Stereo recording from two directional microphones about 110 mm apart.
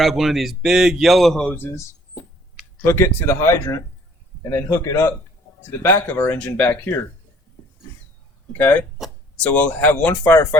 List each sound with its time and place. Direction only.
0.0 s speech: centre (ahead or behind)
1.5 s speech: 20° left (ahead or behind)
2.8 s speech: 25° left (ahead or behind)
8.5 s speech: 15° left (ahead or behind)